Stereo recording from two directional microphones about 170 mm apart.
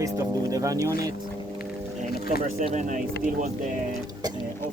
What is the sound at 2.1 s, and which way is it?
Speech, 65° left (ahead or behind).